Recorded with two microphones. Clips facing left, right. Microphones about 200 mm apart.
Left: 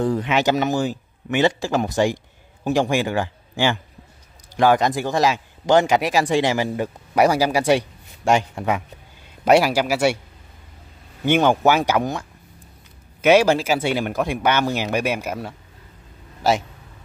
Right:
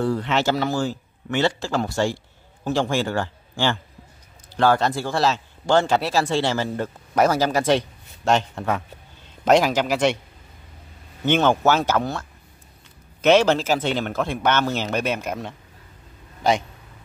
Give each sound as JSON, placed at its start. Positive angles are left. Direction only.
{"t": 0.0, "sound": "a man's voice", "side_deg": 15}
{"t": 11.2, "sound": "a man's voice", "side_deg": 10}